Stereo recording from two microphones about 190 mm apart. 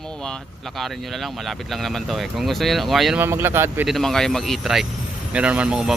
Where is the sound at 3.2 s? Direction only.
10° right (ahead or behind).